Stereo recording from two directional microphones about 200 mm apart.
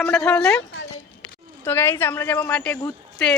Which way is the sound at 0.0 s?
5° left (ahead or behind).